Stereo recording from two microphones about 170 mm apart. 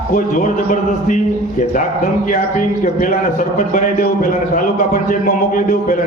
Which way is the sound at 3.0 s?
50° left (ahead or behind).